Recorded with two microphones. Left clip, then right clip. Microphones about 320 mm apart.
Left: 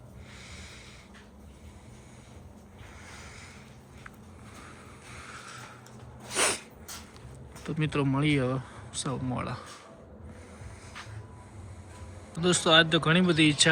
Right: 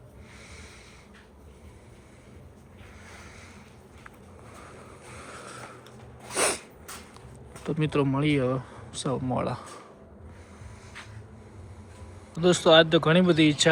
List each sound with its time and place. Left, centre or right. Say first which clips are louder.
4.6 s vehicle: right 2 dB; centre
6.3 s sneeze: right 1 dB; centre
7.6 s speech: right 4 dB; centre
12.4 s speech: right 4 dB; centre